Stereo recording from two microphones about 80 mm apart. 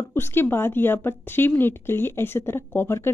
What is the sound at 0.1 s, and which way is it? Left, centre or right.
Speech, left.